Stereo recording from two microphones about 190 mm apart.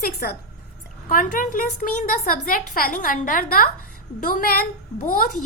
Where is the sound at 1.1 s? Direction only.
45° left (ahead or behind).